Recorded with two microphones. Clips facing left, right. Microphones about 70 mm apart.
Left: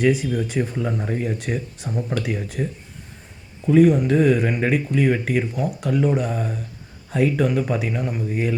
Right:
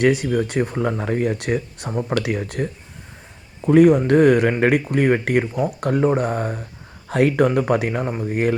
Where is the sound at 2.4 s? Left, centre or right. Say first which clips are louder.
Right 2 dB; right.